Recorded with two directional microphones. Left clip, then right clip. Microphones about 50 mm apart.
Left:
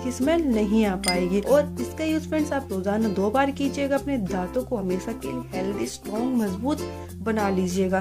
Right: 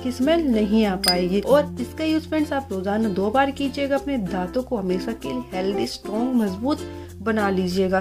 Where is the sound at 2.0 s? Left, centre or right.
Left.